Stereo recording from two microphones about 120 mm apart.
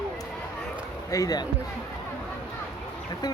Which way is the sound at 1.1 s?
30° left (ahead or behind).